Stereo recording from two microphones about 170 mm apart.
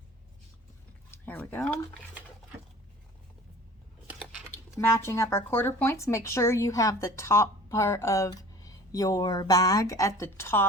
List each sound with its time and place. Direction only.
1.1 s speech: 10° left (ahead or behind)
4.0 s a sound: 10° right (ahead or behind)
4.7 s speech: 15° left (ahead or behind)